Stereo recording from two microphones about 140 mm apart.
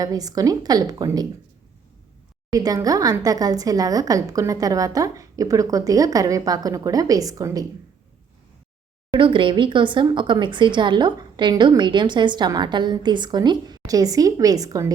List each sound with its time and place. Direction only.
0.0 s speech: 25° right (ahead or behind)
2.5 s speech: 25° right (ahead or behind)
9.1 s speech: 35° right (ahead or behind)